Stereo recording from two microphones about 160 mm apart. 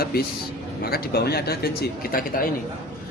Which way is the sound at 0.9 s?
75° left (ahead or behind).